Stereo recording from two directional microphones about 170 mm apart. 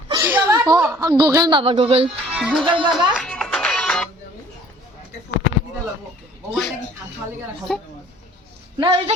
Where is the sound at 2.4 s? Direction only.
Centre (ahead or behind).